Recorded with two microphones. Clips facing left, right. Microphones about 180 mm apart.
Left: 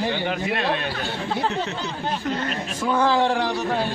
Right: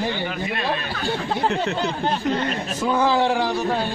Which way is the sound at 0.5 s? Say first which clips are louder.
Left 1 dB; 75° left (ahead or behind).